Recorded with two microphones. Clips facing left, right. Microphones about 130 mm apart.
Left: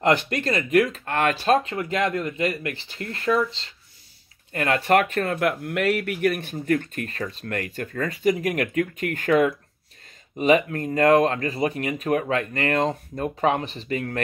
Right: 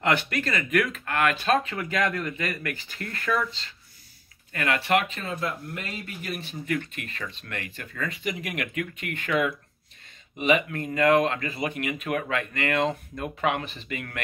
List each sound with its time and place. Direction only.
0.0 s speech: 35° left (ahead or behind)
4.8 s speech: 50° left (ahead or behind)
6.5 s speech: 45° left (ahead or behind)